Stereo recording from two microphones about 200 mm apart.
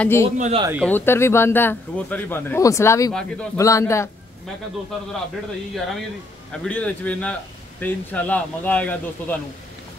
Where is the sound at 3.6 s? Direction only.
15° left (ahead or behind).